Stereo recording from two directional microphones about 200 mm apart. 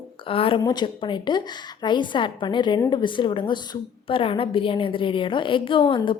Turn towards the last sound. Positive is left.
turn(degrees=25)  # may be behind; listen again after turning